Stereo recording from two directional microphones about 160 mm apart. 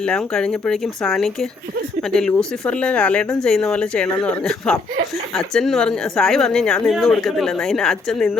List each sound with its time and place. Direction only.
0.0 s a woman's voice: 5° left (ahead or behind)